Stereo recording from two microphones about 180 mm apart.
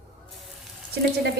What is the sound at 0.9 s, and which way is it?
Speech, 65° right (ahead or behind).